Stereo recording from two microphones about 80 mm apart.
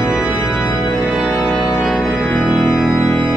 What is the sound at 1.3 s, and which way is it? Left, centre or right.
Organ, left.